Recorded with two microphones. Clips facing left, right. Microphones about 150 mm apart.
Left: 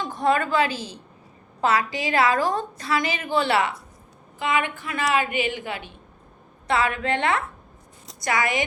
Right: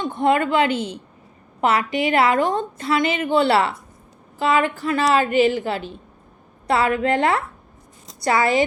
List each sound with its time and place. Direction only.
0.0 s a woman's voice: 25° right (ahead or behind)